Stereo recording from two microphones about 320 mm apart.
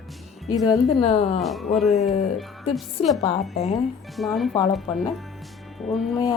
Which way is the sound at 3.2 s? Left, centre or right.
Left.